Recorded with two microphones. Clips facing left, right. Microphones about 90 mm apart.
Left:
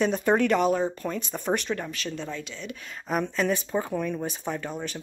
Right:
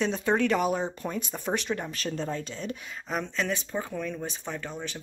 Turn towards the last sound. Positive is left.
turn(degrees=5)  # may be behind; listen again after turning